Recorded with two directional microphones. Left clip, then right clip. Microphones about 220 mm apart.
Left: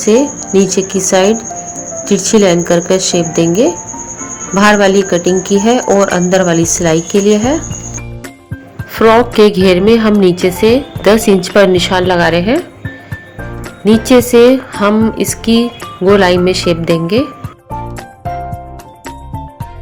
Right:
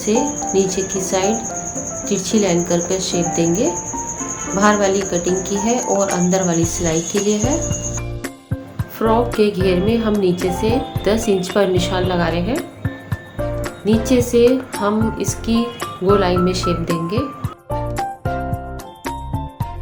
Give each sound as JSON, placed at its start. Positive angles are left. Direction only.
{"t": 0.0, "sound": "speech", "side_deg": 40}
{"t": 9.0, "sound": "speech", "side_deg": 40}
{"t": 13.8, "sound": "speech", "side_deg": 35}